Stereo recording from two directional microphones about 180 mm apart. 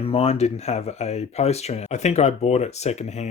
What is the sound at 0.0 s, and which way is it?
Speech, 35° left (ahead or behind).